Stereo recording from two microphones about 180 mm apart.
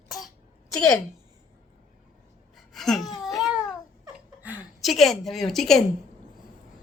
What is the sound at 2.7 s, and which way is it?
Speech, centre (ahead or behind).